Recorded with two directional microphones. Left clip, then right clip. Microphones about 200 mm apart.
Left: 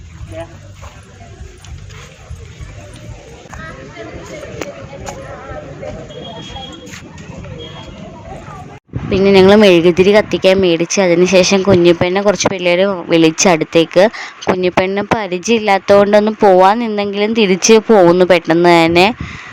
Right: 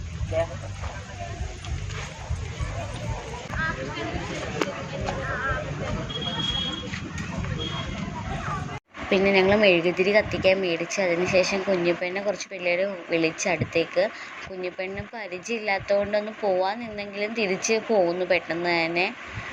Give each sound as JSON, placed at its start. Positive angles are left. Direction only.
{"t": 4.6, "sound": "a sound", "side_deg": 20}
{"t": 5.1, "sound": "music", "side_deg": 60}
{"t": 9.0, "sound": "speech", "side_deg": 45}